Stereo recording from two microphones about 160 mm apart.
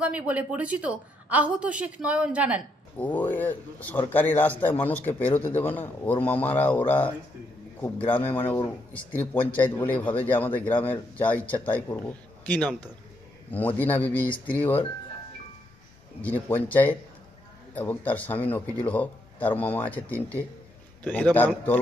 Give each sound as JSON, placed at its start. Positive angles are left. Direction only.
{"t": 0.0, "sound": "speech", "side_deg": -10}
{"t": 3.0, "sound": "a man's voice", "side_deg": 10}
{"t": 16.2, "sound": "a man's voice", "side_deg": 10}